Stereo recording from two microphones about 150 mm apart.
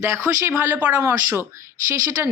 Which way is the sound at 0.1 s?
15° right (ahead or behind).